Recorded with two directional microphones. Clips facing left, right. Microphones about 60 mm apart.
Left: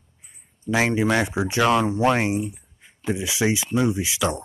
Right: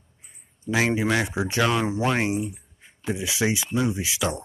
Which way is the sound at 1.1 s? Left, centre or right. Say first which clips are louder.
Left 2 dB; centre.